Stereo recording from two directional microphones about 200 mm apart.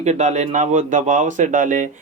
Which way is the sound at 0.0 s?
35° right (ahead or behind).